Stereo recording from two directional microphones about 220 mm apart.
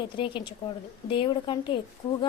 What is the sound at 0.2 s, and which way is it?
A woman's voice, 20° left (ahead or behind).